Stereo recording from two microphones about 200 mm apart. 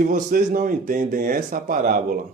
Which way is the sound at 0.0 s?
45° right (ahead or behind).